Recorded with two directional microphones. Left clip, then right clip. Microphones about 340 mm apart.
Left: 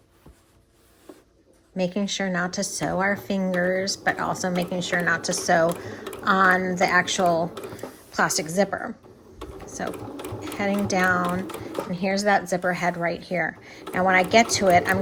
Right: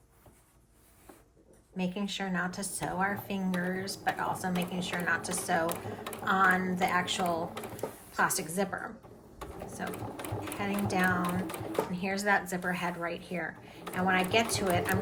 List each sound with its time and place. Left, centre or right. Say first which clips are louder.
1.7 s speech: left 10 dB; centre